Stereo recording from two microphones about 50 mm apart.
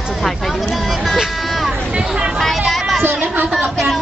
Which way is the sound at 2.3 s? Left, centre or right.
Centre.